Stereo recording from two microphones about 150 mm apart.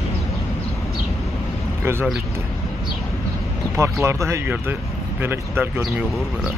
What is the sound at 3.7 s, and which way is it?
Speech, 20° right (ahead or behind).